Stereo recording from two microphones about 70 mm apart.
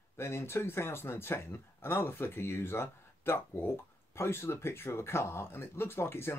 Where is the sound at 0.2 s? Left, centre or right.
Left.